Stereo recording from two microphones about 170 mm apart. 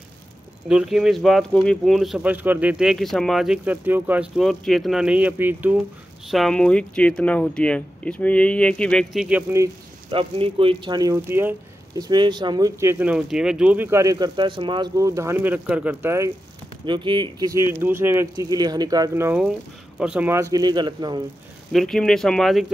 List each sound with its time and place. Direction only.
0.7 s speech: 5° right (ahead or behind)
6.3 s speech: 5° left (ahead or behind)
10.1 s speech: 35° right (ahead or behind)
13.0 s speech: 5° right (ahead or behind)
16.8 s speech: 30° right (ahead or behind); by 20.4 s 10° right (ahead or behind)
20.5 s speech: 25° right (ahead or behind)
21.7 s speech: 5° left (ahead or behind)